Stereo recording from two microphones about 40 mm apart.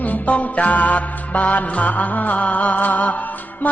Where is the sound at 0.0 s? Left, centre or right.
Left.